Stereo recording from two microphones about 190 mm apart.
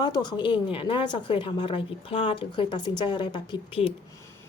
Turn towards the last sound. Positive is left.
turn(degrees=25)  # may be behind; listen again after turning